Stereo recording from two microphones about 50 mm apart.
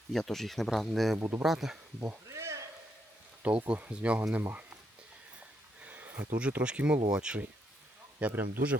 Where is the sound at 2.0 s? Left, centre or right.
Right.